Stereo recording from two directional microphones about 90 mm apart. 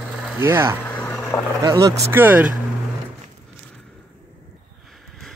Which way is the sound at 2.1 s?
20° right (ahead or behind).